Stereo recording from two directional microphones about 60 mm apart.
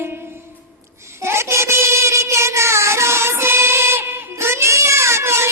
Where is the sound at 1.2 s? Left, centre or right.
Right.